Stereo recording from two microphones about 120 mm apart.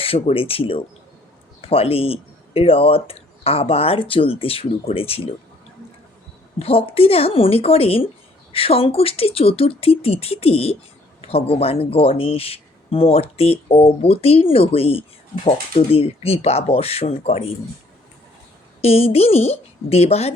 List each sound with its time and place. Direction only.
0.0 s speech: 50° left (ahead or behind)
6.6 s speech: 55° left (ahead or behind)
18.8 s speech: 60° left (ahead or behind)